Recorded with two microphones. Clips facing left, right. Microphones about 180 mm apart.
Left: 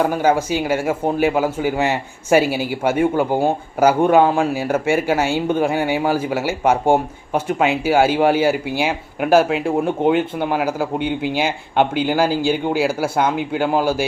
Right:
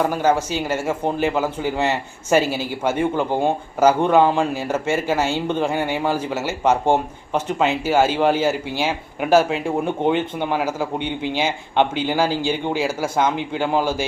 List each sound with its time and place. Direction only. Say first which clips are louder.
0.0 s speech: left 2 dB; 10° left (ahead or behind)